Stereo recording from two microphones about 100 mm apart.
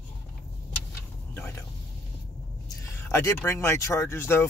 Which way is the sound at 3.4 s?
25° left (ahead or behind).